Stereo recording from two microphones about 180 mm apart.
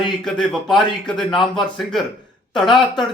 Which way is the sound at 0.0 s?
Centre (ahead or behind).